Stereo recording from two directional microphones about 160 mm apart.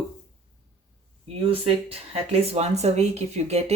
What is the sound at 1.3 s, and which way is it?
Speech, 35° right (ahead or behind).